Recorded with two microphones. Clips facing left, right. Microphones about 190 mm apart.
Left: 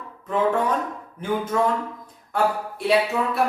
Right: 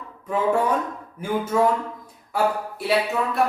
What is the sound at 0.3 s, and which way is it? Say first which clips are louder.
A woman's voice: even; 10° right (ahead or behind).